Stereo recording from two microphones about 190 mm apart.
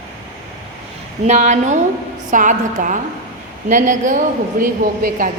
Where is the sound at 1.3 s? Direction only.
40° right (ahead or behind).